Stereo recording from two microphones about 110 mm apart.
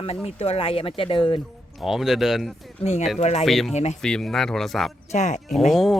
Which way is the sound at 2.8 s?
75° left (ahead or behind).